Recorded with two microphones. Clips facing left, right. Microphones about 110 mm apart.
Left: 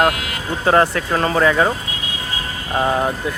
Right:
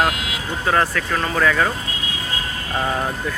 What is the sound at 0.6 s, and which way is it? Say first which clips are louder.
Speech: left 5 dB; 30° left (ahead or behind).